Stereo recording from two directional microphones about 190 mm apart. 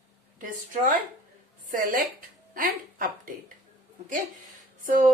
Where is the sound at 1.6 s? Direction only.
50° right (ahead or behind).